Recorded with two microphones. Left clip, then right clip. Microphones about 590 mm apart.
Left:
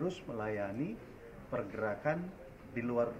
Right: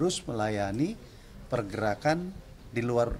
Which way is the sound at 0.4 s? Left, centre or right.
Right.